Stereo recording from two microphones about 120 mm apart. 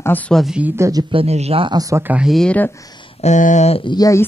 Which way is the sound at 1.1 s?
55° right (ahead or behind).